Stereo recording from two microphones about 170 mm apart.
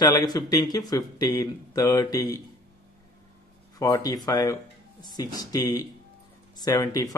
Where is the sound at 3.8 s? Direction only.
20° left (ahead or behind).